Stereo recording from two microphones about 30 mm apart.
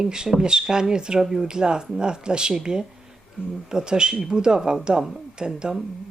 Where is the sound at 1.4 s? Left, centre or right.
Right.